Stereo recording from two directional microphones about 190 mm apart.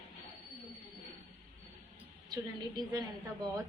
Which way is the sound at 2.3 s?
20° right (ahead or behind).